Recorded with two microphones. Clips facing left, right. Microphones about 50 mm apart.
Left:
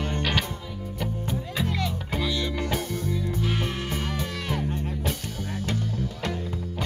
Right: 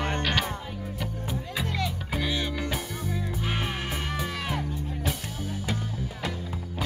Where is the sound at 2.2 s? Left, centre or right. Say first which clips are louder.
Left 2 dB; right; by 5.1 s centre.